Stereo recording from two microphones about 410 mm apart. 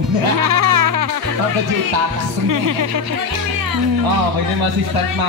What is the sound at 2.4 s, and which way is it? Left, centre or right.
Speech, right.